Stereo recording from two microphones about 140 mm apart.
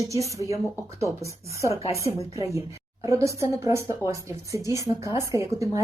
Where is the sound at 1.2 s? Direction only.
20° right (ahead or behind).